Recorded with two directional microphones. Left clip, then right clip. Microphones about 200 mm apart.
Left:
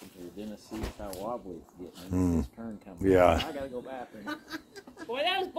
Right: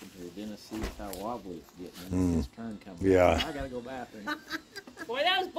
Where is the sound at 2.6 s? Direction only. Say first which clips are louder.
Even; 90° right.